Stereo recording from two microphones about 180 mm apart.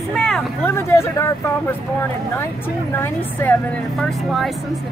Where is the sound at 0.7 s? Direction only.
15° left (ahead or behind).